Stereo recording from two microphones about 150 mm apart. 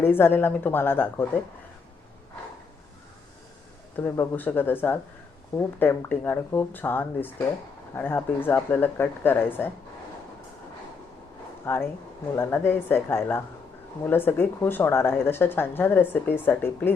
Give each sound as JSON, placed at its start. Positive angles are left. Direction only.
{"t": 0.0, "sound": "speech", "side_deg": 15}
{"t": 3.9, "sound": "speech", "side_deg": 15}
{"t": 11.6, "sound": "speech", "side_deg": 15}